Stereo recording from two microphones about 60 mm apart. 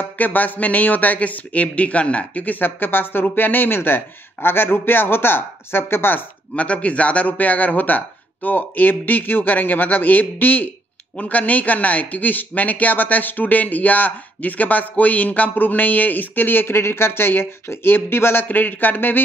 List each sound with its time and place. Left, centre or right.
0.0 s a man's voice: left